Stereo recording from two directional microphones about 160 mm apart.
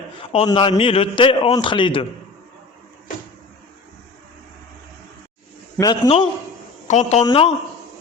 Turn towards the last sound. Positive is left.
turn(degrees=35)  # may be behind; listen again after turning